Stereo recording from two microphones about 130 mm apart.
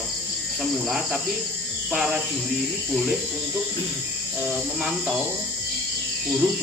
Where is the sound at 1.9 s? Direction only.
5° right (ahead or behind).